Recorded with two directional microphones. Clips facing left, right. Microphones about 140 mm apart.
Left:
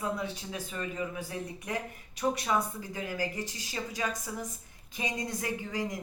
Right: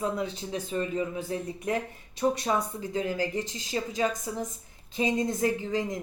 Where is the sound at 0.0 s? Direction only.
25° right (ahead or behind).